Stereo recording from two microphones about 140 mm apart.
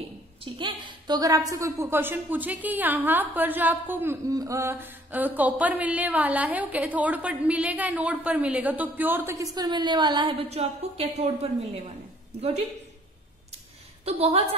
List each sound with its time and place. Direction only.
0.6 s a woman's voice: 30° right (ahead or behind)
10.5 s a woman's voice: 50° right (ahead or behind)
14.0 s a woman's voice: 45° right (ahead or behind)